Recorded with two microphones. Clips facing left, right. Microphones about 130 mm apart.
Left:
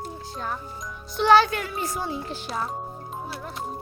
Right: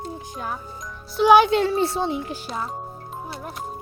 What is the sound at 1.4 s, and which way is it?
Speech, 25° right (ahead or behind).